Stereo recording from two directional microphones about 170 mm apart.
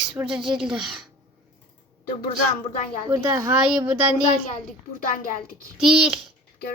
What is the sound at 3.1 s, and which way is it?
Speech, 15° right (ahead or behind).